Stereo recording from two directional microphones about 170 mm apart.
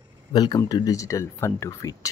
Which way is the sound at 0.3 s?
25° left (ahead or behind).